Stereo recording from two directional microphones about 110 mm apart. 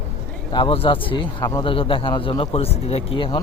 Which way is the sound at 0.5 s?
55° left (ahead or behind).